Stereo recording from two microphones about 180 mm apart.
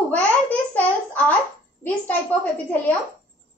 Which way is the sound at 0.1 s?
10° left (ahead or behind).